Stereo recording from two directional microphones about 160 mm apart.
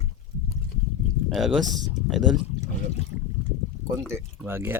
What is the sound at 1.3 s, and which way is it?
Speech, centre (ahead or behind).